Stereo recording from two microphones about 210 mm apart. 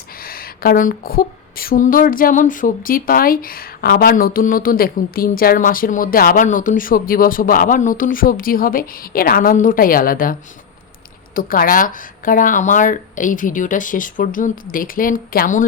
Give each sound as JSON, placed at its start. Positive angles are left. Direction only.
{"t": 0.2, "sound": "speech", "side_deg": 45}
{"t": 11.3, "sound": "speech", "side_deg": 45}